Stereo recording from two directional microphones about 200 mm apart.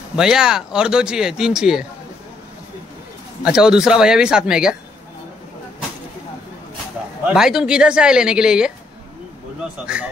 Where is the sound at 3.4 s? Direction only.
5° right (ahead or behind).